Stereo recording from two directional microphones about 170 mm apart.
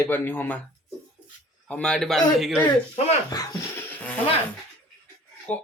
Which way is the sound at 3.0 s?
40° left (ahead or behind).